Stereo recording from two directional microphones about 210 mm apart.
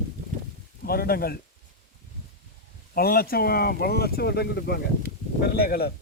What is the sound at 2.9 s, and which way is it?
Speech, 45° left (ahead or behind).